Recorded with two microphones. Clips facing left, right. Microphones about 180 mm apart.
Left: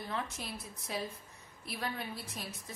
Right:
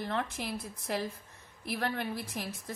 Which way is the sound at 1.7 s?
65° right (ahead or behind).